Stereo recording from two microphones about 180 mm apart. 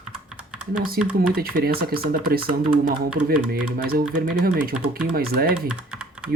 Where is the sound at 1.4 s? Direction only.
55° right (ahead or behind).